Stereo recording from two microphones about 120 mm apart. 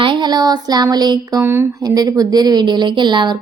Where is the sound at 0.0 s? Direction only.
40° right (ahead or behind).